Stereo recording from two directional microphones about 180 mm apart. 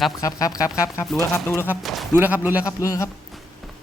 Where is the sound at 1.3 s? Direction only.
15° left (ahead or behind).